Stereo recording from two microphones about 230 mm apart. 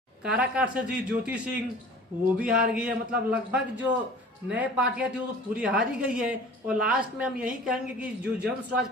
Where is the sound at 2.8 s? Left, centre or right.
Centre.